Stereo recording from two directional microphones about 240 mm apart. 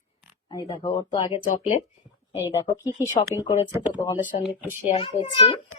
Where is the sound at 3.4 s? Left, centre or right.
Centre.